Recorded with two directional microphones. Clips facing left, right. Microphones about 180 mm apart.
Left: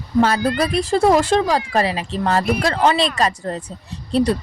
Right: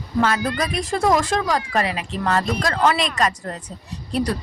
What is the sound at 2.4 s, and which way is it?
Speech, 10° left (ahead or behind).